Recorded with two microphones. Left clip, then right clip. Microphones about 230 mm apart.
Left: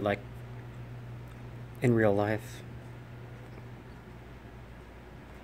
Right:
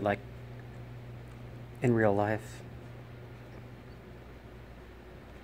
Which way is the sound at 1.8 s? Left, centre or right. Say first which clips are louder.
Left 1 dB; centre.